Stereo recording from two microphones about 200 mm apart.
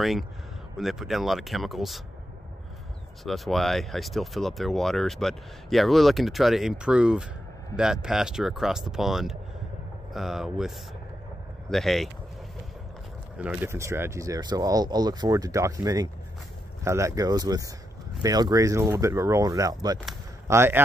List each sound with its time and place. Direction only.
0.0 s speech: centre (ahead or behind)
3.3 s speech: centre (ahead or behind)
11.7 s speech: centre (ahead or behind)
13.4 s speech: 10° right (ahead or behind)